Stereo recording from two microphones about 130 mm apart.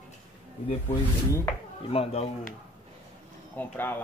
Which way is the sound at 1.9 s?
50° left (ahead or behind).